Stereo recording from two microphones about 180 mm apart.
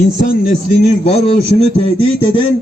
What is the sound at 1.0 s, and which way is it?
A man's voice, 35° left (ahead or behind).